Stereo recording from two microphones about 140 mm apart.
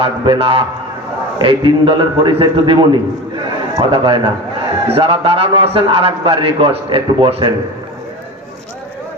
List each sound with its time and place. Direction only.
0.0 s a man's voice: 40° right (ahead or behind)